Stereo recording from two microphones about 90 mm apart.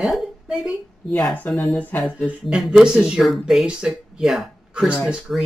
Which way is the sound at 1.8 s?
20° left (ahead or behind).